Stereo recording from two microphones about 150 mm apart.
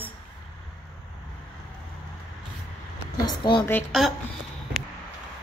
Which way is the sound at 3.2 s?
30° left (ahead or behind).